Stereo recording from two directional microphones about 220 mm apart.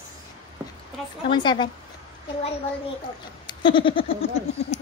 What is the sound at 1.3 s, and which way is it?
Speech, 20° left (ahead or behind).